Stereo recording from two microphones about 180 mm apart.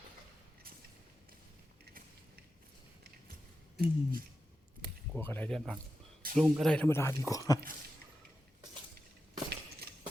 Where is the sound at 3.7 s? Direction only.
55° right (ahead or behind).